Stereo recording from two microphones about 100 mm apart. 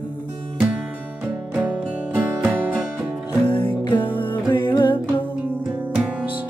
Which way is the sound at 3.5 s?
55° left (ahead or behind).